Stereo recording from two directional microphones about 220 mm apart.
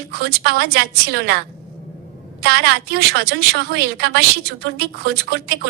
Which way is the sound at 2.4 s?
45° right (ahead or behind).